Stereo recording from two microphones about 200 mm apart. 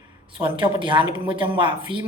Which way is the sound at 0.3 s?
25° right (ahead or behind).